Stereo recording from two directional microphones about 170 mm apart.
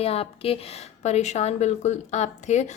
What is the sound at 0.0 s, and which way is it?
A woman's voice, 35° left (ahead or behind).